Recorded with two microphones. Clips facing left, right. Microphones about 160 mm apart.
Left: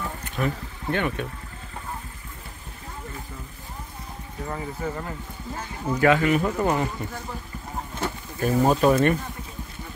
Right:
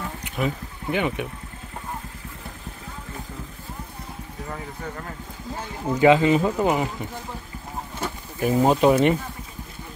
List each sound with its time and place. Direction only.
0.2 s speech: 10° right (ahead or behind)
4.5 s speech: 5° left (ahead or behind)
5.9 s speech: 20° right (ahead or behind)
8.0 s speech: 15° right (ahead or behind)